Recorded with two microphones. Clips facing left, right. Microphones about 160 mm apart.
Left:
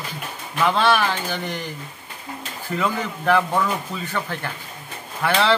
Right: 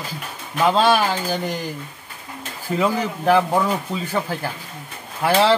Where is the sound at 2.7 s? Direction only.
30° right (ahead or behind).